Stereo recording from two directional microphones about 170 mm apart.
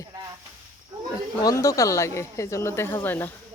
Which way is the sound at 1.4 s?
20° left (ahead or behind).